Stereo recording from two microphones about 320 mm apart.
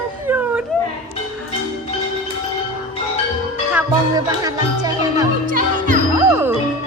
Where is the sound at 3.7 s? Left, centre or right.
Centre.